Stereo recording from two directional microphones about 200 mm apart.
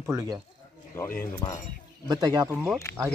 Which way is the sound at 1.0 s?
15° left (ahead or behind).